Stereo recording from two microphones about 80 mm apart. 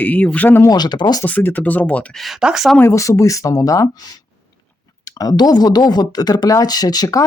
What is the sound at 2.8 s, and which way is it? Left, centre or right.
Speech, left.